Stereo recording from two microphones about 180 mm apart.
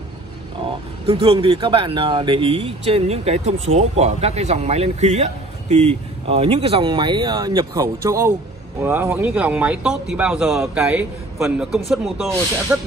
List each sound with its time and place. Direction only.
1.0 s speech: 30° right (ahead or behind); by 12.9 s 5° right (ahead or behind)